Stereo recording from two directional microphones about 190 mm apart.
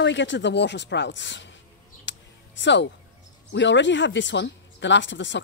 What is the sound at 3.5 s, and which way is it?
Speech, 70° left (ahead or behind).